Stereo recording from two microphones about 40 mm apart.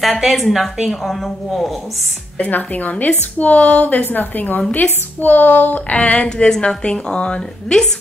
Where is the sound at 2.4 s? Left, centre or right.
Left.